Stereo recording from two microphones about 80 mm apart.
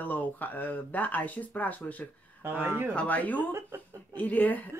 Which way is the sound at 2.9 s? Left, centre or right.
Centre.